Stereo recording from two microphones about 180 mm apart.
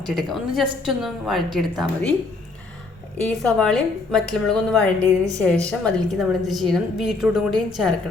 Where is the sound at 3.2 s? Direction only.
5° left (ahead or behind).